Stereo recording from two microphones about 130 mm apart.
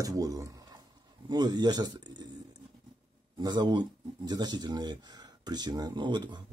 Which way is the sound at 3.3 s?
35° right (ahead or behind).